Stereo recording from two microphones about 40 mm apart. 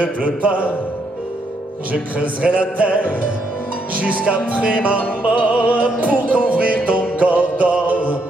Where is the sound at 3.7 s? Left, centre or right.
Right.